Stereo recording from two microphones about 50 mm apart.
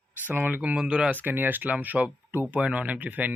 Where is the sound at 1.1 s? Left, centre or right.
Right.